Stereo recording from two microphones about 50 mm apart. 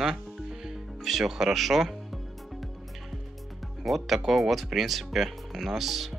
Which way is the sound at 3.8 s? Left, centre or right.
Centre.